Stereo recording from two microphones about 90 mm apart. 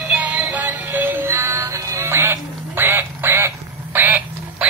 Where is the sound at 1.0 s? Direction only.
25° right (ahead or behind).